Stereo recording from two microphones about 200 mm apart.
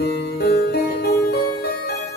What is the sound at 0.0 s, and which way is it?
Music, 55° left (ahead or behind).